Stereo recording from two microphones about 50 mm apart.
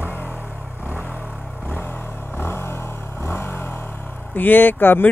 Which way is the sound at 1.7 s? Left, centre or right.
Left.